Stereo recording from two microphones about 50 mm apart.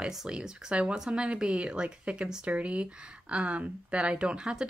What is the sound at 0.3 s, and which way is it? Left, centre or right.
Speech, centre.